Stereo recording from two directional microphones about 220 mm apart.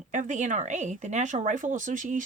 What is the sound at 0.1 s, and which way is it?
Speech, 35° right (ahead or behind).